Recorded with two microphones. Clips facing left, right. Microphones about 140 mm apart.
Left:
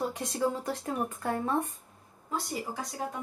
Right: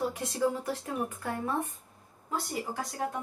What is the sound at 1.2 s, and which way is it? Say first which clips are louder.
Speech: left 3 dB; 30° left (ahead or behind).